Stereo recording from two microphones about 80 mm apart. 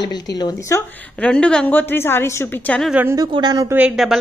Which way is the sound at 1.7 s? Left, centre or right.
Left.